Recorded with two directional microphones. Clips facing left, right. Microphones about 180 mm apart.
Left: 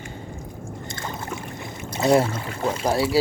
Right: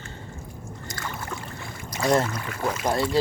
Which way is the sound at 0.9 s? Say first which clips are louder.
Left 1 dB; 25° left (ahead or behind).